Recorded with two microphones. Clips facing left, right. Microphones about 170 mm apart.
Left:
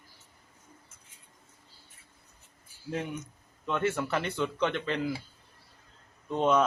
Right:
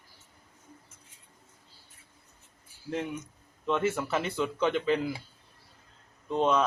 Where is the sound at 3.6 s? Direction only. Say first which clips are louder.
Right 1 dB; centre (ahead or behind).